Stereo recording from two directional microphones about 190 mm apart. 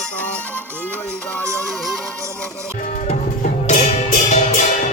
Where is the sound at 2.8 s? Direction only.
40° left (ahead or behind).